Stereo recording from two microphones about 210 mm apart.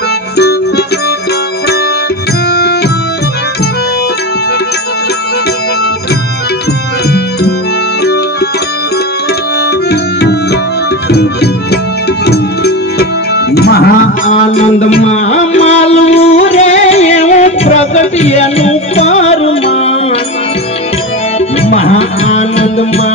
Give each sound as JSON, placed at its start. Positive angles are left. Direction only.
{"t": 13.6, "sound": "tabla", "side_deg": 50}
{"t": 14.5, "sound": "music", "side_deg": 35}
{"t": 21.6, "sound": "music", "side_deg": 30}